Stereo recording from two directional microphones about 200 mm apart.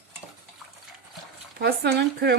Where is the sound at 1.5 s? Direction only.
50° right (ahead or behind).